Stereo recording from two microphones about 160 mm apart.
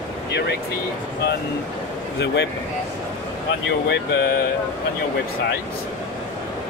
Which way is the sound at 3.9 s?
90° left.